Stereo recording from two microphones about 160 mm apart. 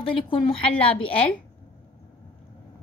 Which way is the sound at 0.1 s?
30° left (ahead or behind).